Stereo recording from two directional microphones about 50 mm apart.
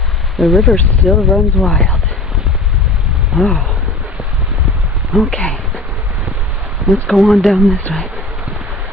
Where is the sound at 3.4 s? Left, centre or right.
Left.